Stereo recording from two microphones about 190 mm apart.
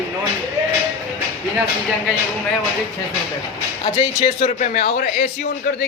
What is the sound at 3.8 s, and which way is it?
A man's voice, 35° left (ahead or behind).